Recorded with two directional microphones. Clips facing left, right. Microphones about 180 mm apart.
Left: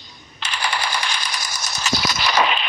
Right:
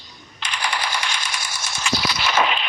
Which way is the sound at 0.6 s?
30° left (ahead or behind).